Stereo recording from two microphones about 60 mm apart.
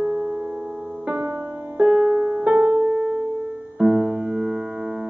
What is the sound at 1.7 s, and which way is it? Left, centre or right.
Music, centre.